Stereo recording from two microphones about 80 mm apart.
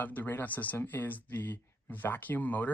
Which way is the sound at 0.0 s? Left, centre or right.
Left.